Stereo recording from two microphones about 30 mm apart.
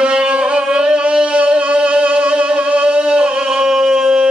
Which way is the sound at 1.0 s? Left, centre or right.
Right.